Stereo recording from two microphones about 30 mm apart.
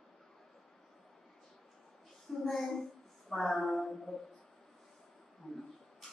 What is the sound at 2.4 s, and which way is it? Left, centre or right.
A woman's voice, centre.